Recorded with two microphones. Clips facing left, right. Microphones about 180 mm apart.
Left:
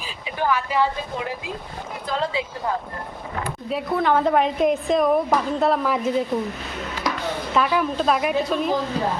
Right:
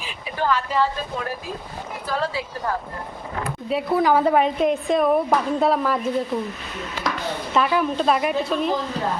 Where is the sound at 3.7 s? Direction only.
5° right (ahead or behind).